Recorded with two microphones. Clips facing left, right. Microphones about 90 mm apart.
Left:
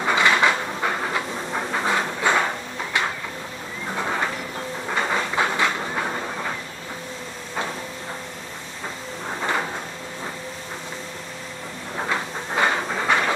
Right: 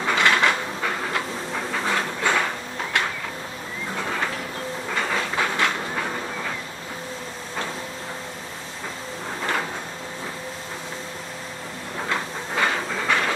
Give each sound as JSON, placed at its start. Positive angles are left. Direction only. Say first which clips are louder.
{"t": 0.0, "sound": "train", "louder": "left 1 dB", "side_deg": 15}
{"t": 3.9, "sound": "a sound", "louder": "left 3 dB", "side_deg": 20}
{"t": 4.9, "sound": "train", "louder": "left 2 dB", "side_deg": 15}
{"t": 9.4, "sound": "drawer open or close", "louder": "left 1 dB", "side_deg": 15}
{"t": 12.5, "sound": "train", "louder": "left 2 dB", "side_deg": 20}